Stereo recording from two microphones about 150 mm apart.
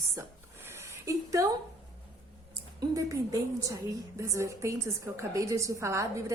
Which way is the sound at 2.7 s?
25° right (ahead or behind).